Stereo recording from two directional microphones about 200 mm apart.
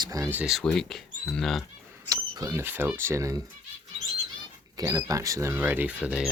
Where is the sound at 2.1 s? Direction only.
15° right (ahead or behind).